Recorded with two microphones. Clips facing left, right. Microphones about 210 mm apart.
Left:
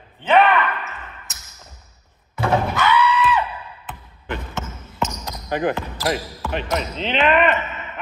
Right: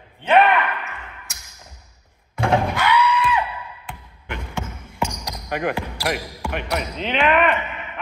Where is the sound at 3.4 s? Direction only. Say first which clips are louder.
Even; 10° right (ahead or behind).